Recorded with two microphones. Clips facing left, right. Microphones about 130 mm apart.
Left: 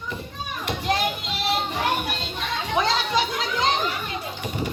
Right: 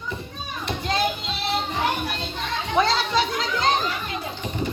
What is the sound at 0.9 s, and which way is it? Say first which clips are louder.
Children playing: even; 70° left (ahead or behind).